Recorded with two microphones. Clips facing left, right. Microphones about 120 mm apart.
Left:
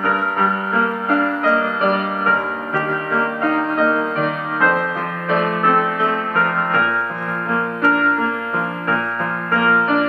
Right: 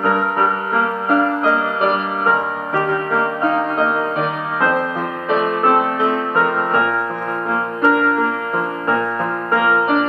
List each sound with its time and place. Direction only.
0.7 s music: 20° right (ahead or behind)
9.5 s music: 20° right (ahead or behind)